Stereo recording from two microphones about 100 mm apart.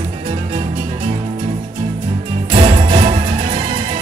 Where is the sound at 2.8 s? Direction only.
65° right (ahead or behind).